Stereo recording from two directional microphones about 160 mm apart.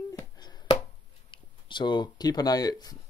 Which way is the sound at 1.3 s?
30° left (ahead or behind).